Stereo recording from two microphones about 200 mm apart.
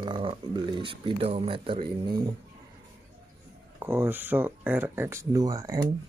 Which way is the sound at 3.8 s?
10° right (ahead or behind).